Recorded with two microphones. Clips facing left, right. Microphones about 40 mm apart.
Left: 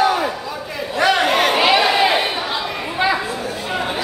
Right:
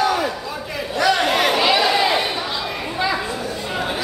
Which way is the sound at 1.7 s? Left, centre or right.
Centre.